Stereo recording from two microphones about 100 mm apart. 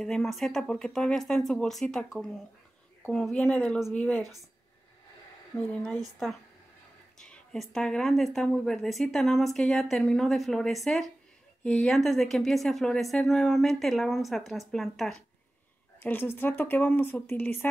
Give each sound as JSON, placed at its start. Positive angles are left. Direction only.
{"t": 0.0, "sound": "speech", "side_deg": 5}
{"t": 5.7, "sound": "speech", "side_deg": 10}
{"t": 7.2, "sound": "a sound", "side_deg": 5}
{"t": 7.7, "sound": "speech", "side_deg": 5}
{"t": 16.0, "sound": "speech", "side_deg": 20}